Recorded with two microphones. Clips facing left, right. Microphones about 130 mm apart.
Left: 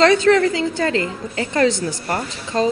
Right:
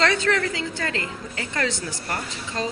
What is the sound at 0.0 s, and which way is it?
A woman's voice, 20° left (ahead or behind).